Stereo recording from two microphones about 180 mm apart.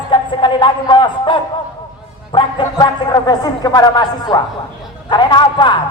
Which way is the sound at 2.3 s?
25° left (ahead or behind).